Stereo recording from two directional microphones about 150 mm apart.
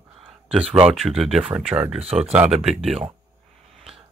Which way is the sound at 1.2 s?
Centre (ahead or behind).